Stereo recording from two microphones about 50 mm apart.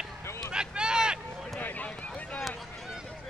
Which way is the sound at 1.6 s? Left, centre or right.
Left.